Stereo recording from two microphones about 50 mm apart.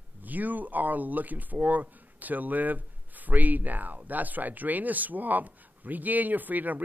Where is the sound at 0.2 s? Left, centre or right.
Right.